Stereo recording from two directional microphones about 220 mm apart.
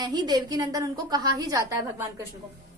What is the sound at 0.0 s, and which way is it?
A woman's voice, 20° right (ahead or behind).